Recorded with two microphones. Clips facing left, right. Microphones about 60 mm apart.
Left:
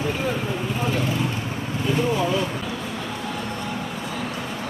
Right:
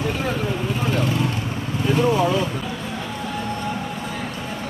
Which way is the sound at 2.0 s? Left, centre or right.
Right.